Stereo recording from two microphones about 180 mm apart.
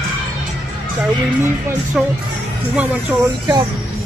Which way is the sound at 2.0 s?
5° right (ahead or behind).